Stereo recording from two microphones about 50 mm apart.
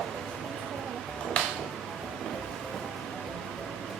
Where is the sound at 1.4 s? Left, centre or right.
Left.